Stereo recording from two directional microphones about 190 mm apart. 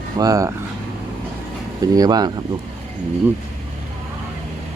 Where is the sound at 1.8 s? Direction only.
20° right (ahead or behind).